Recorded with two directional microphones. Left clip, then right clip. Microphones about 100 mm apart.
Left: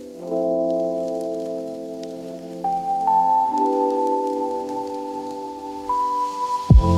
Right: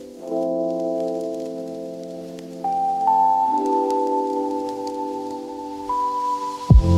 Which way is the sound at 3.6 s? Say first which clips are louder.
Even; 20° left (ahead or behind).